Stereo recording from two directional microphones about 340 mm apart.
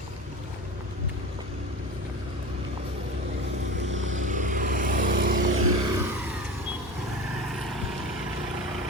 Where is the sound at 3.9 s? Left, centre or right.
Right.